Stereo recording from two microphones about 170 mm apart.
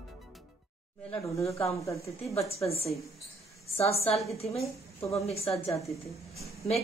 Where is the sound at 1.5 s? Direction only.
35° left (ahead or behind).